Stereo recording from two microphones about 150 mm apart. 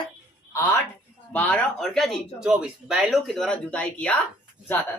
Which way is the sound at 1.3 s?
10° left (ahead or behind).